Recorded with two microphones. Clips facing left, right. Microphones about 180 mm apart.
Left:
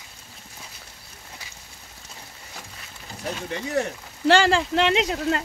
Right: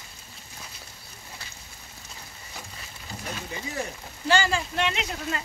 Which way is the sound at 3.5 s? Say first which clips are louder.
Left 9 dB; 70° left (ahead or behind).